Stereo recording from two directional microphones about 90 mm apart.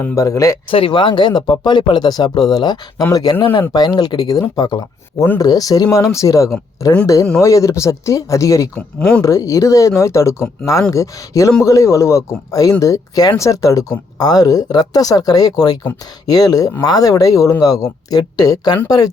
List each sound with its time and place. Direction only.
0.2 s speech: 35° left (ahead or behind)
0.7 s speech: 75° left (ahead or behind); by 2.7 s 50° left (ahead or behind)
3.0 s speech: 40° left (ahead or behind)
8.7 s speech: 10° left (ahead or behind)
9.2 s speech: 35° left (ahead or behind)